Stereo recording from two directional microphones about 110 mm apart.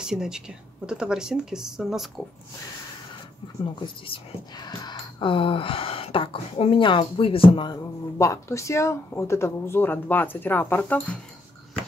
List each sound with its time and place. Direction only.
0.0 s speech: 5° right (ahead or behind)
3.8 s speech: 45° left (ahead or behind)
8.2 s speech: 25° left (ahead or behind)